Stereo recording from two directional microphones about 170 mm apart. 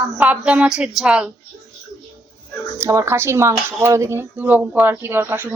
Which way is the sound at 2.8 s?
15° right (ahead or behind).